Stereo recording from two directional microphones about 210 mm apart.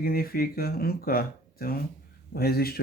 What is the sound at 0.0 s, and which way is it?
Speech, 45° left (ahead or behind).